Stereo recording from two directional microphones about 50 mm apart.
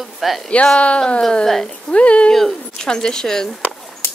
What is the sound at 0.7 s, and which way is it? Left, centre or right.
Speech, left.